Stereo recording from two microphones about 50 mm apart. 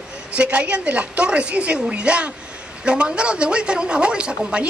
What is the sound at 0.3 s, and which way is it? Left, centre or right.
A man's voice, right.